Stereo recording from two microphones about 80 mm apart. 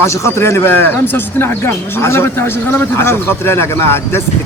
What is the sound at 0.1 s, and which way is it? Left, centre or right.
Speech, left.